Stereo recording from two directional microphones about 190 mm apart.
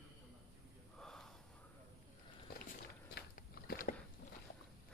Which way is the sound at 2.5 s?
55° left (ahead or behind).